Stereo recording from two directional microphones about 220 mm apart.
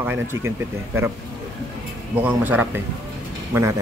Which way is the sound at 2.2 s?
10° right (ahead or behind).